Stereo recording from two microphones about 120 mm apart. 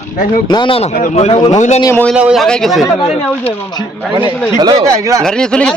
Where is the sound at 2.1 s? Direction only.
10° right (ahead or behind).